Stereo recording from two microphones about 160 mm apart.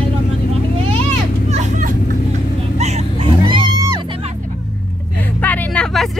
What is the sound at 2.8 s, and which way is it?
Music, 30° right (ahead or behind).